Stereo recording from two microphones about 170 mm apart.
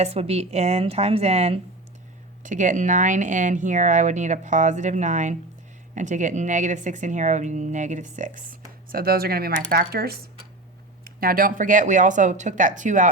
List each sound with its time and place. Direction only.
0.0 s a woman's voice: 35° right (ahead or behind)
2.4 s speech: 50° right (ahead or behind)
8.9 s speech: 60° right (ahead or behind)